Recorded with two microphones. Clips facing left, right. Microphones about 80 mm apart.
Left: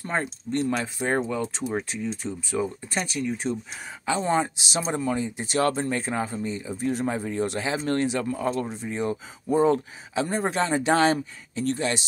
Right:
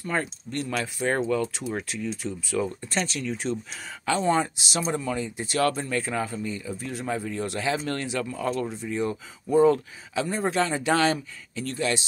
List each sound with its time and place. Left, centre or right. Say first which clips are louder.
0.1 s speech: left 2 dB; left